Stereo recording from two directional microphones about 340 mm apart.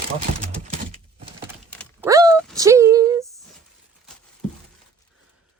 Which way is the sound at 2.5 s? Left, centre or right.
Centre.